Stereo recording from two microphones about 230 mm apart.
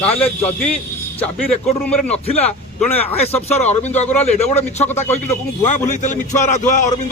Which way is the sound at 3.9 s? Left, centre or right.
Left.